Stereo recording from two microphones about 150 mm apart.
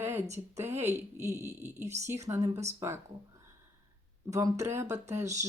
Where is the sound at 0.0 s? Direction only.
15° right (ahead or behind).